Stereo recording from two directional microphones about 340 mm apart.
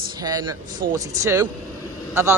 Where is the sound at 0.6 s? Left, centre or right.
Right.